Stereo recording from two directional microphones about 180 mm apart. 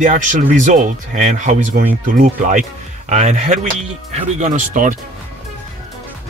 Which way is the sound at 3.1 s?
40° right (ahead or behind).